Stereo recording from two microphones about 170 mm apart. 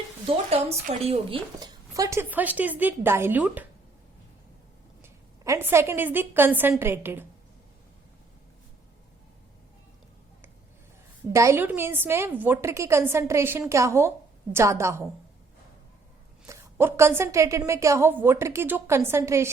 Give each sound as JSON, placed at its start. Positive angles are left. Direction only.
{"t": 0.3, "sound": "a woman's voice", "side_deg": -35}
{"t": 1.5, "sound": "a woman's voice", "side_deg": -20}
{"t": 5.0, "sound": "a woman's voice", "side_deg": -15}
{"t": 11.3, "sound": "a woman's voice", "side_deg": -15}
{"t": 16.5, "sound": "a woman's voice", "side_deg": -15}